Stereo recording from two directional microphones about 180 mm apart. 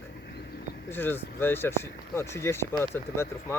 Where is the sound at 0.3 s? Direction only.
65° left (ahead or behind).